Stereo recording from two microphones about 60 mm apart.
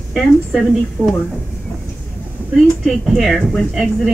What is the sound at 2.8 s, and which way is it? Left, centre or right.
Speech, centre.